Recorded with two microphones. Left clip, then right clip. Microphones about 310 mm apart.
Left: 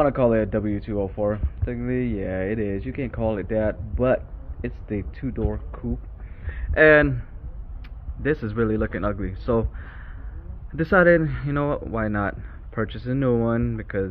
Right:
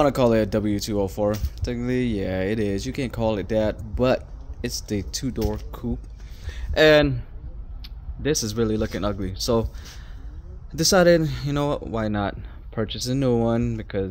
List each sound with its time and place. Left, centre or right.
0.0 s speech: right
10.8 s speech: centre